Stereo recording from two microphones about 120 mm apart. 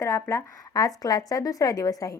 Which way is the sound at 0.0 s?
25° left (ahead or behind).